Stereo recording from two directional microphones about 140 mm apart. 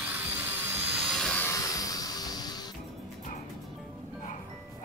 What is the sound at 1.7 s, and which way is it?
Music, 25° left (ahead or behind).